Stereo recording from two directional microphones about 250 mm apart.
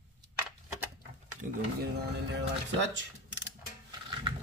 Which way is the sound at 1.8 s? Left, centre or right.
Right.